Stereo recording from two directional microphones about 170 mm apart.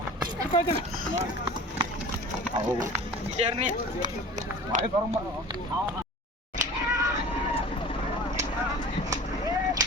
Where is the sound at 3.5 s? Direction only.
45° right (ahead or behind).